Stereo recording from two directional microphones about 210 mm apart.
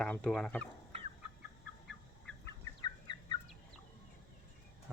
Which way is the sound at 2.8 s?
20° left (ahead or behind).